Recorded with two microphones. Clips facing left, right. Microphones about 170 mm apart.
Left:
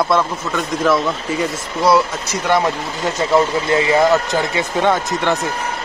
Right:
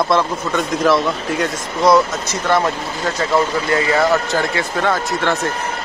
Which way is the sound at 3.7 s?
20° left (ahead or behind).